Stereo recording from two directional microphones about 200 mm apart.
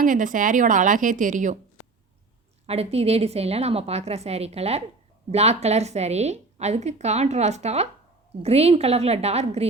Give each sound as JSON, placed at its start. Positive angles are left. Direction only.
{"t": 0.0, "sound": "a woman's voice", "side_deg": -40}
{"t": 2.6, "sound": "a woman's voice", "side_deg": -30}